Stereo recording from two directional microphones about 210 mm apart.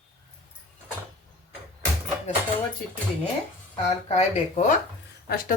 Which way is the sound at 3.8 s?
30° left (ahead or behind).